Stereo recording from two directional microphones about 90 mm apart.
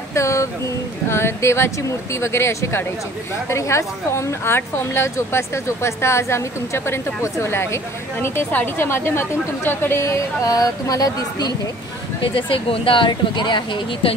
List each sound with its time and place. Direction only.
0.1 s a sound: 35° left (ahead or behind)
1.0 s speech: 30° left (ahead or behind); by 11.5 s 45° left (ahead or behind)
12.2 s speech: 75° left (ahead or behind); by 14.1 s 60° left (ahead or behind)